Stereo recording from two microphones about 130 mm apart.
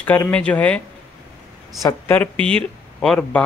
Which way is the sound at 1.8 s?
15° left (ahead or behind).